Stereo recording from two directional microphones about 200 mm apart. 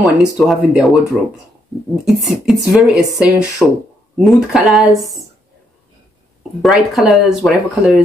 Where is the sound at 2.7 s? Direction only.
Centre (ahead or behind).